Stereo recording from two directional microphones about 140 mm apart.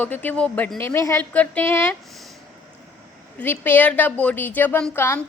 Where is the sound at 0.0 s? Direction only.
10° left (ahead or behind).